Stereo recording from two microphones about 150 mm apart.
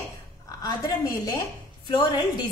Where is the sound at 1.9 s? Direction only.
30° left (ahead or behind).